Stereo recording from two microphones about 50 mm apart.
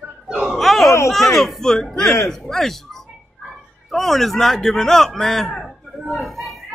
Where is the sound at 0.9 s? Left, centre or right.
Left.